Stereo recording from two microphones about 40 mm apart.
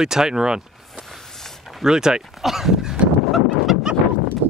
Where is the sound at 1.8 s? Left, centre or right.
Centre.